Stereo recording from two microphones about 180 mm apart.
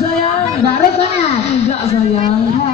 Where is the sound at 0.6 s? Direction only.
35° left (ahead or behind).